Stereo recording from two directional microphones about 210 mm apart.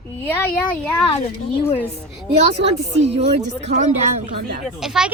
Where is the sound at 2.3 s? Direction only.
30° right (ahead or behind).